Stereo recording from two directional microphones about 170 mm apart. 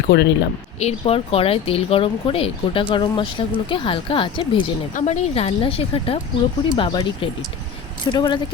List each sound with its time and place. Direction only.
0.1 s speech: 80° left
0.8 s speech: 35° left (ahead or behind)
4.9 s speech: 40° left (ahead or behind)